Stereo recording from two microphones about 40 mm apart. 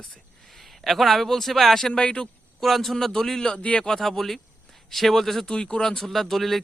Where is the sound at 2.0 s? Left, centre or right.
Left.